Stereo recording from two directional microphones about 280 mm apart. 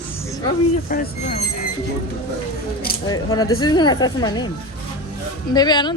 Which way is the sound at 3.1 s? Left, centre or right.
Centre.